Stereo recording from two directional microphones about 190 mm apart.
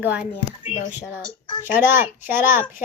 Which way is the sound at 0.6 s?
35° left (ahead or behind).